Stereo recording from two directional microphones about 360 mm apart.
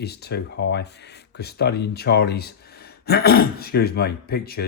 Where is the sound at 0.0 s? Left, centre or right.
Left.